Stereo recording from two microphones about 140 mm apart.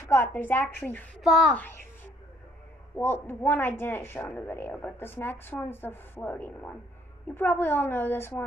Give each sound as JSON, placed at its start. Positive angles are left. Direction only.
{"t": 0.1, "sound": "a woman's voice", "side_deg": 15}
{"t": 1.2, "sound": "a child's voice", "side_deg": 0}
{"t": 1.5, "sound": "a woman's voice", "side_deg": 15}
{"t": 3.0, "sound": "a woman's voice", "side_deg": 15}